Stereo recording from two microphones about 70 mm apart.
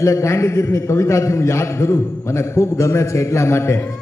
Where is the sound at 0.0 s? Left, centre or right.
Left.